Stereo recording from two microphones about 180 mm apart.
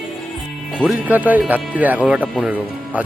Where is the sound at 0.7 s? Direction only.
5° right (ahead or behind).